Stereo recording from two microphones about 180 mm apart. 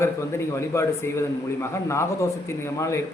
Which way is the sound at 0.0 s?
15° left (ahead or behind).